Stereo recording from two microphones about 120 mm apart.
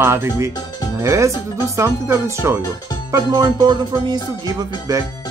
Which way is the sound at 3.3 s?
35° right (ahead or behind).